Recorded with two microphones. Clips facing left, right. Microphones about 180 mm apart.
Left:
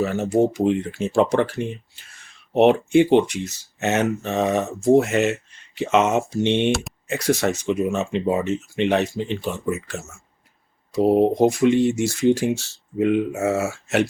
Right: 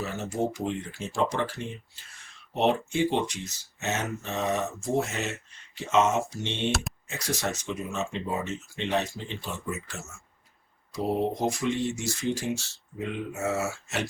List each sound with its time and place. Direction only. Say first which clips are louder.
0.0 s speech: left 10 dB; 65° left (ahead or behind)
6.7 s speech: left 8 dB; centre (ahead or behind)
7.1 s speech: left 11 dB; 65° left (ahead or behind)